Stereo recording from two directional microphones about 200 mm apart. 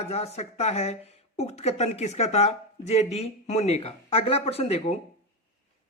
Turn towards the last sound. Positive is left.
turn(degrees=30)  # may be behind; listen again after turning